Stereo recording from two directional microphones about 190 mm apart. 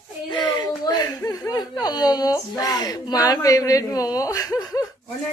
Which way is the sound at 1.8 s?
20° left (ahead or behind).